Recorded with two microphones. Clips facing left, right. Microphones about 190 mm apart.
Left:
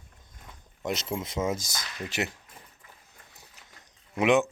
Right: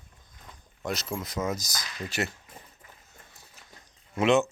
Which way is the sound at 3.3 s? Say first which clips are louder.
Even; 15° left (ahead or behind).